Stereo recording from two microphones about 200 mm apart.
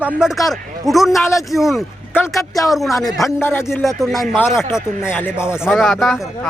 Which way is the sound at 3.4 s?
10° left (ahead or behind).